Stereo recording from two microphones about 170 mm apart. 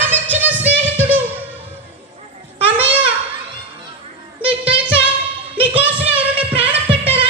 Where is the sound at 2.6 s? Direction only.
10° right (ahead or behind).